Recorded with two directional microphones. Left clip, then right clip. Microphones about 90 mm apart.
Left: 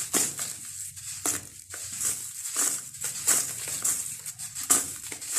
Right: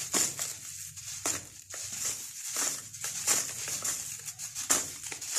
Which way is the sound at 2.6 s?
30° right (ahead or behind).